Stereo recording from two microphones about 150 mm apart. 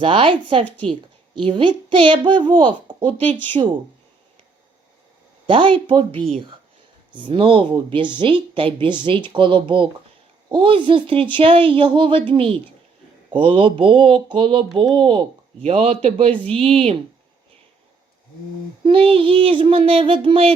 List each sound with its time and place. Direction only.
0.0 s speech: 35° right (ahead or behind)
0.6 s a woman's voice: 10° left (ahead or behind)
1.4 s speech: 35° right (ahead or behind)
5.5 s speech: 35° right (ahead or behind)
16.3 s a woman's voice: 10° left (ahead or behind)
16.6 s speech: 40° right (ahead or behind)
18.8 s speech: 35° right (ahead or behind)